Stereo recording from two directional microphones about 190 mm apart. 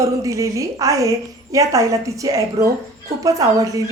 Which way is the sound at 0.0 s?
15° right (ahead or behind).